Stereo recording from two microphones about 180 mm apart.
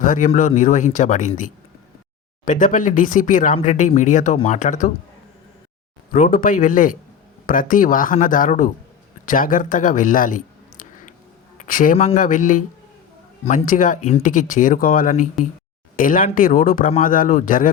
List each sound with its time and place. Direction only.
0.0 s speech: 45° left (ahead or behind)
6.1 s speech: 50° left (ahead or behind)